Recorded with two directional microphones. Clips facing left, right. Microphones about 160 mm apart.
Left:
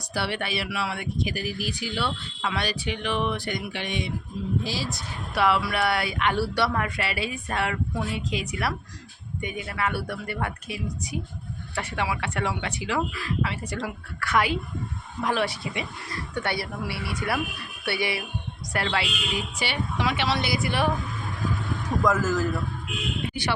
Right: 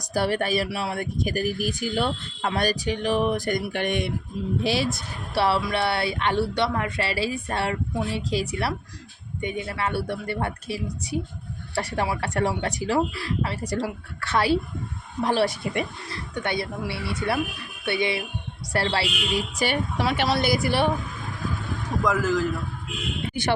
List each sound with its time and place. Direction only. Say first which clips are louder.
0.0 s speech: right 5 dB; 45° right (ahead or behind)
4.6 s speech: right 7 dB; 65° right (ahead or behind)
5.3 s a woman's voice: right 1 dB; 30° right (ahead or behind)
15.6 s speech: right 5 dB; 50° right (ahead or behind)
16.3 s a woman's voice: right 2 dB; 20° right (ahead or behind); by 20.8 s 35° right (ahead or behind)
22.0 s a man's voice: right 1 dB; centre (ahead or behind)
23.3 s speech: right 6 dB; 50° right (ahead or behind)